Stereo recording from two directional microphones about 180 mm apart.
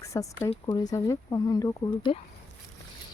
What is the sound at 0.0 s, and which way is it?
Speech, 20° left (ahead or behind).